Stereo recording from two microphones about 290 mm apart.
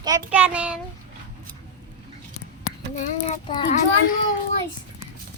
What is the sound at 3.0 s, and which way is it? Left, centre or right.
A child's voice, left.